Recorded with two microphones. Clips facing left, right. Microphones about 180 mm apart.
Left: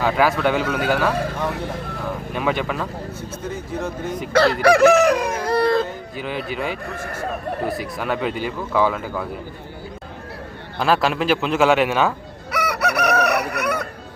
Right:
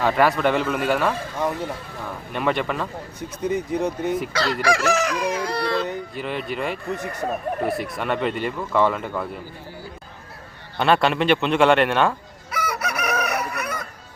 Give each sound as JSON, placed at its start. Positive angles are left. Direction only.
{"t": 0.0, "sound": "speech", "side_deg": 0}
{"t": 2.3, "sound": "speech", "side_deg": 0}
{"t": 3.2, "sound": "speech", "side_deg": -15}
{"t": 4.3, "sound": "speech", "side_deg": 55}
{"t": 4.6, "sound": "crowing", "side_deg": 60}
{"t": 6.1, "sound": "speech", "side_deg": 0}
{"t": 10.8, "sound": "speech", "side_deg": 0}
{"t": 12.5, "sound": "chicken", "side_deg": 65}